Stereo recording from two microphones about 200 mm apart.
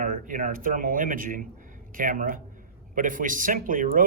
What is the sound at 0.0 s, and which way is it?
Speech, 40° right (ahead or behind).